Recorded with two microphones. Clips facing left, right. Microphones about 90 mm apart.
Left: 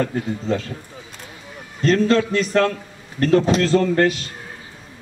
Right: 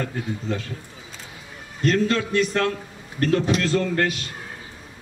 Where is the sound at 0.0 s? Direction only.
35° left (ahead or behind).